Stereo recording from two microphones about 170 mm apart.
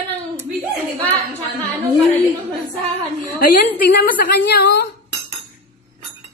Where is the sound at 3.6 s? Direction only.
65° left (ahead or behind).